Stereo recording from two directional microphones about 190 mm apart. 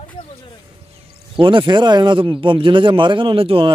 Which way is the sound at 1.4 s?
25° right (ahead or behind).